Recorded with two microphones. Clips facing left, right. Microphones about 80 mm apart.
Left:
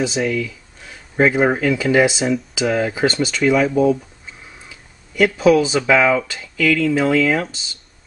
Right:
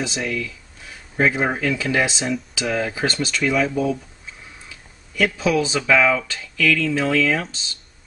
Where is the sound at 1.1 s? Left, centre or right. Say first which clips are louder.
Left 4 dB; left.